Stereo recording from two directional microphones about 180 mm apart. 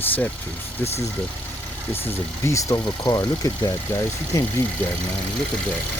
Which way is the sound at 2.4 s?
15° left (ahead or behind).